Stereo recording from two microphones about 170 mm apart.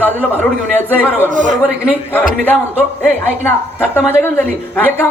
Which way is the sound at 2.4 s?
10° left (ahead or behind).